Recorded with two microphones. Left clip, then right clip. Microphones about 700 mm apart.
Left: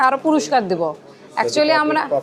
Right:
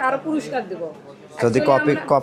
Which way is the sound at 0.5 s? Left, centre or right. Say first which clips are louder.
Left 10 dB; left.